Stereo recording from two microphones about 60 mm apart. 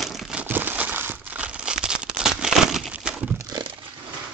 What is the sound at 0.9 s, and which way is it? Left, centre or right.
Crumpling, right.